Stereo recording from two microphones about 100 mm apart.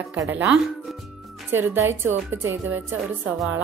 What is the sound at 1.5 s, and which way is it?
A woman's voice, 25° right (ahead or behind).